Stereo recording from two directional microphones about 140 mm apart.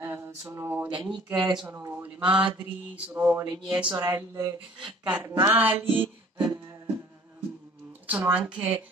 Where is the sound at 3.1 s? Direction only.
15° right (ahead or behind).